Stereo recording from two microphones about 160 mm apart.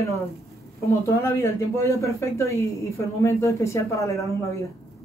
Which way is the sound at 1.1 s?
15° left (ahead or behind).